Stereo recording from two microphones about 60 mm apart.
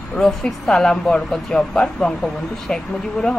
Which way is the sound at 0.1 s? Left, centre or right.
Centre.